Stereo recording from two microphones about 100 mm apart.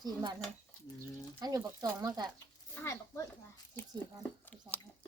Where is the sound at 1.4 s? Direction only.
35° right (ahead or behind).